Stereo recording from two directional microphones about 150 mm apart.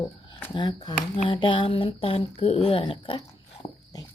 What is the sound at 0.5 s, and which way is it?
Speech, 30° left (ahead or behind).